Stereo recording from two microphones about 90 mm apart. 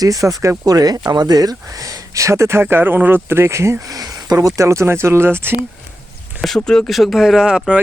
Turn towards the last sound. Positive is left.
turn(degrees=-10)  # may be behind; listen again after turning